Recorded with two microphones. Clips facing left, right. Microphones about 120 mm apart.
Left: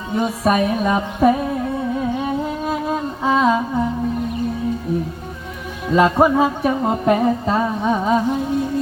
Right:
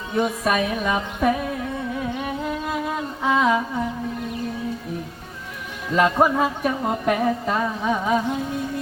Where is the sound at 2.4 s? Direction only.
25° left (ahead or behind).